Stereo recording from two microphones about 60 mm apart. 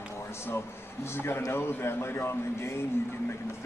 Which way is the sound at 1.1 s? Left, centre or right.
Left.